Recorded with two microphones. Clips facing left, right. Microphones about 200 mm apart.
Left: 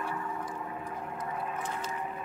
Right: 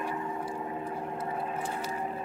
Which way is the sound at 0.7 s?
30° right (ahead or behind).